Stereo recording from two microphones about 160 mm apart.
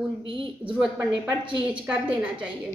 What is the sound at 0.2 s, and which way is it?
Speech, 30° right (ahead or behind).